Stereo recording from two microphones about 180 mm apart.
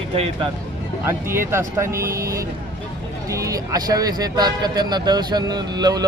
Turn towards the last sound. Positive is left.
turn(degrees=-20)  # may be behind; listen again after turning